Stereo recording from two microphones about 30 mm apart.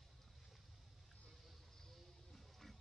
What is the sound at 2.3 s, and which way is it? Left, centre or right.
Music, centre.